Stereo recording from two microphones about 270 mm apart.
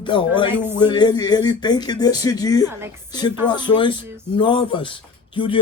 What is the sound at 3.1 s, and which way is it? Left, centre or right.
Speech, centre.